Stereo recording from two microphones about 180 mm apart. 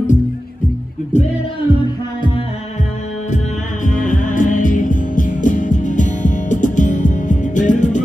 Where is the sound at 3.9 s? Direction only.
45° left (ahead or behind).